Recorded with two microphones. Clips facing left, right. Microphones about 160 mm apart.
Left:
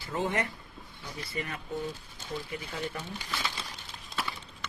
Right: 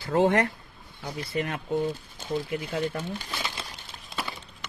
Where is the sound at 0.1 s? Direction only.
90° right.